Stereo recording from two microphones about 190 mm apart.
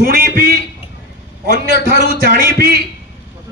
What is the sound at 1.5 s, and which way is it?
Speech, 60° left (ahead or behind).